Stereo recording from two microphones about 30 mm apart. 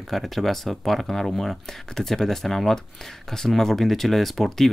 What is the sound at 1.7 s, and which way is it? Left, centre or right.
Speech, centre.